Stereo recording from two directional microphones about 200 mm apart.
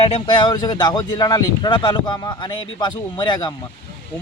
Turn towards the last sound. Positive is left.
turn(degrees=20)  # may be behind; listen again after turning